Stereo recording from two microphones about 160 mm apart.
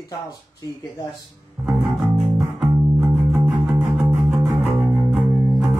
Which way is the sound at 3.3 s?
5° right (ahead or behind).